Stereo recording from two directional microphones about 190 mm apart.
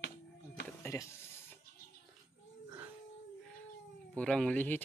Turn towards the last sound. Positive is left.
turn(degrees=5)  # may be behind; listen again after turning